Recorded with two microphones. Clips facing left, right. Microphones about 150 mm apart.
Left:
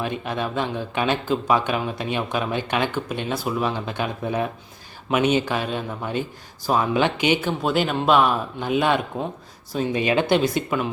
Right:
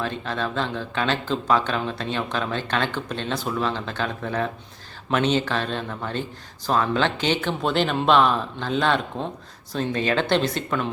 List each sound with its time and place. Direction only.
0.0 s speech: 15° left (ahead or behind)